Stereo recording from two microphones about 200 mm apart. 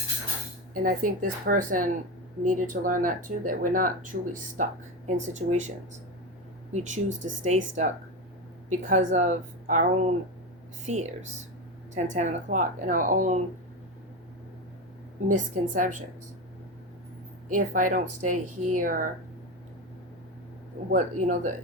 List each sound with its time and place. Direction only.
0.8 s speech: 40° right (ahead or behind)
6.7 s speech: 35° right (ahead or behind)
8.7 s speech: 40° right (ahead or behind)
15.3 s speech: 40° right (ahead or behind)
17.5 s speech: 40° right (ahead or behind)
20.9 s speech: 40° right (ahead or behind)